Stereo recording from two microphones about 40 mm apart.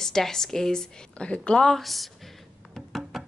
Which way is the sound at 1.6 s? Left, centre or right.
Centre.